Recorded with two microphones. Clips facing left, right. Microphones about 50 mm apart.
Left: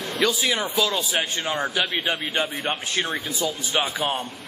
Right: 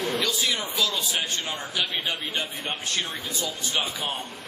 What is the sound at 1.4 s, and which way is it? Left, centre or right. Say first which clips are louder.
Speech: left 5 dB; left.